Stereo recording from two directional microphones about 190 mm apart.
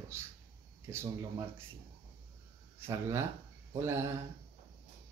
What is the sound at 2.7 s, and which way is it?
Speech, 15° right (ahead or behind).